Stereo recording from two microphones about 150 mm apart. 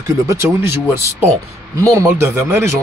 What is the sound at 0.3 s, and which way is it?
Speech, 15° right (ahead or behind).